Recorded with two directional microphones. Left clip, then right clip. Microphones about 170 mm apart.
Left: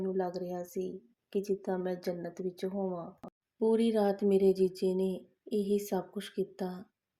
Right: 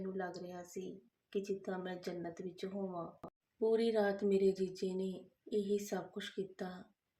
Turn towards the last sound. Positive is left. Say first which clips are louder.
# left 7 dB
turn(degrees=40)  # may be behind; listen again after turning